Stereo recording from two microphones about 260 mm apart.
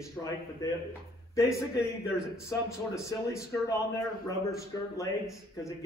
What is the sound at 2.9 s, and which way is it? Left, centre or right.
A man's voice, centre.